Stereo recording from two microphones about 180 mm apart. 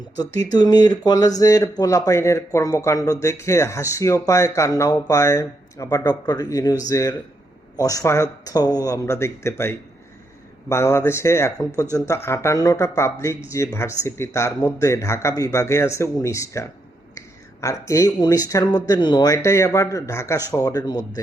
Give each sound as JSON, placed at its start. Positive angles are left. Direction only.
{"t": 0.5, "sound": "speech", "side_deg": 20}